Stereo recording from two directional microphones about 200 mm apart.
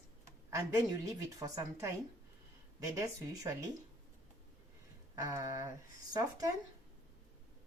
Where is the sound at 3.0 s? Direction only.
15° right (ahead or behind).